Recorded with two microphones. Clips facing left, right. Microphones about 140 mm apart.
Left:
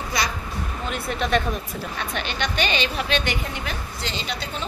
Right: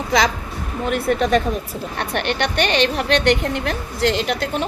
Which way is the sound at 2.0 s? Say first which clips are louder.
Right 7 dB; 70° right (ahead or behind).